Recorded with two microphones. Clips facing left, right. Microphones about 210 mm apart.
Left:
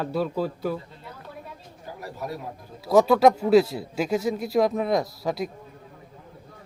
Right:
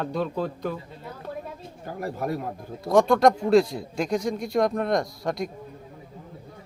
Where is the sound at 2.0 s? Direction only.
55° right (ahead or behind).